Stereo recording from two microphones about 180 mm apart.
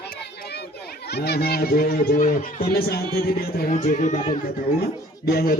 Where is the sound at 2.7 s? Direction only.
60° left (ahead or behind).